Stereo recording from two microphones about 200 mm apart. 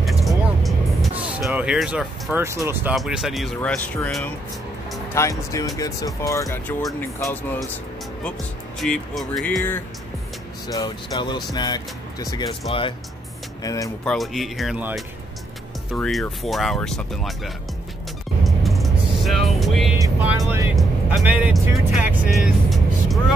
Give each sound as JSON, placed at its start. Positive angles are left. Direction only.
{"t": 0.0, "sound": "vehicle", "side_deg": 0}
{"t": 2.4, "sound": "speech", "side_deg": -10}
{"t": 8.2, "sound": "speech", "side_deg": 5}
{"t": 10.7, "sound": "speech", "side_deg": 20}
{"t": 14.0, "sound": "speech", "side_deg": 0}
{"t": 18.4, "sound": "vehicle", "side_deg": 0}
{"t": 20.0, "sound": "speech", "side_deg": -10}